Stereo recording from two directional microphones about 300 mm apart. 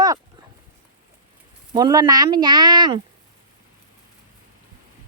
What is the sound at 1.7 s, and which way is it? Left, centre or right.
Speech, centre.